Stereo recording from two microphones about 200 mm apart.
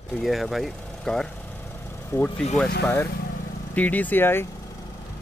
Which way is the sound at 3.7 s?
10° left (ahead or behind).